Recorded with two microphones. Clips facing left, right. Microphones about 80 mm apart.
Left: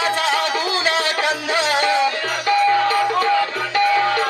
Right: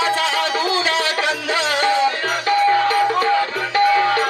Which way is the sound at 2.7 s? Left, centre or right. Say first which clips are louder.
Right 1 dB; right.